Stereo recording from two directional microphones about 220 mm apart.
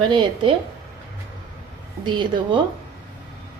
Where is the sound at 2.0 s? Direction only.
20° right (ahead or behind).